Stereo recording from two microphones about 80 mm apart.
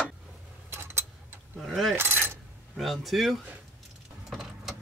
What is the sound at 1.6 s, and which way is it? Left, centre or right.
Mechanisms, centre.